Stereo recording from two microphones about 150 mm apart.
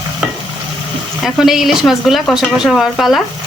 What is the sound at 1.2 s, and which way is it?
Speech, centre (ahead or behind).